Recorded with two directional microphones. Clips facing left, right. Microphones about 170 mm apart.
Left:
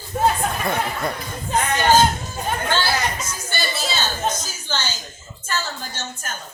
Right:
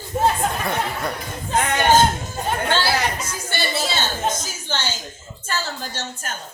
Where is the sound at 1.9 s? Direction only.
25° right (ahead or behind).